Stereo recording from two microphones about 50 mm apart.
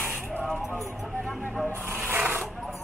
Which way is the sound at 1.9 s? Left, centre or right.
Right.